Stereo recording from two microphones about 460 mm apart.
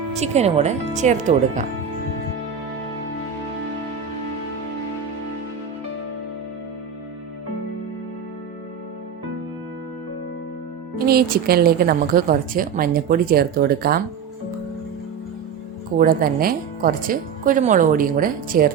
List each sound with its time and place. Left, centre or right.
0.2 s speech: centre
10.9 s a woman's voice: centre
16.0 s speech: centre